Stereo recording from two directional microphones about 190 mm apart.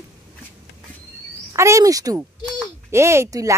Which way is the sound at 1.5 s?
15° right (ahead or behind).